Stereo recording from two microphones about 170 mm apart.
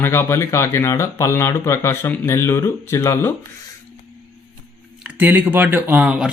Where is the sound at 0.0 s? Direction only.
15° left (ahead or behind).